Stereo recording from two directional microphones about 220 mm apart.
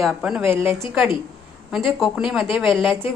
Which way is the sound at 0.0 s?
5° right (ahead or behind).